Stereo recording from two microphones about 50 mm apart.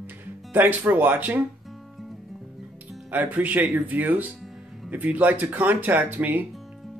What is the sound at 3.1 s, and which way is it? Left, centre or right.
Speech, right.